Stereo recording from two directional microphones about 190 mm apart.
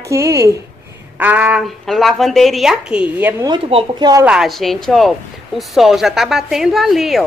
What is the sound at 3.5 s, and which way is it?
Speech, 25° right (ahead or behind).